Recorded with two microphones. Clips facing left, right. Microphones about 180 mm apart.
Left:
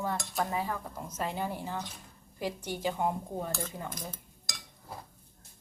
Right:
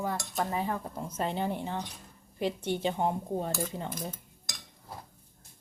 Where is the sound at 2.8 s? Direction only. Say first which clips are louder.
Left 1 dB; 25° right (ahead or behind).